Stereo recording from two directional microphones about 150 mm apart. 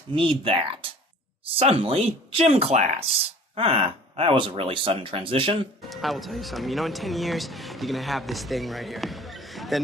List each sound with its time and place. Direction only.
0.1 s speech: 35° right (ahead or behind)
5.9 s speech: centre (ahead or behind)